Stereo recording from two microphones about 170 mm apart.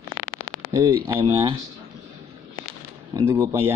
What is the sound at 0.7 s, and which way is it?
Speech, 20° right (ahead or behind).